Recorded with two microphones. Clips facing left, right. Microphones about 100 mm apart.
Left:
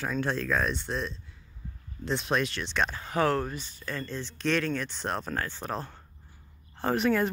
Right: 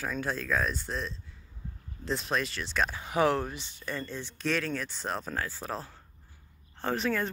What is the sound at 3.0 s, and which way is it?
Speech, 15° right (ahead or behind).